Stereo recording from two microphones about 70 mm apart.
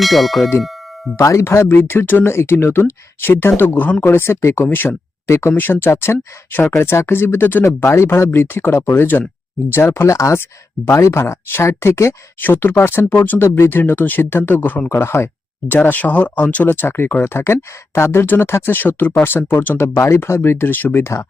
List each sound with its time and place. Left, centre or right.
0.0 s clang: centre
1.1 s speech: left
4.0 s speech: left
5.5 s speech: left
5.9 s speech: left
12.4 s speech: left
15.7 s speech: left
16.6 s speech: left
21.0 s speech: left